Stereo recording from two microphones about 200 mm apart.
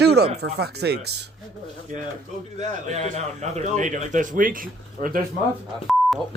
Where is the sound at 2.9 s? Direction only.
35° right (ahead or behind).